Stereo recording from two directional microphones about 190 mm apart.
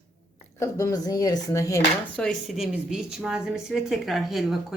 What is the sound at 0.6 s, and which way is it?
Speech, 15° left (ahead or behind).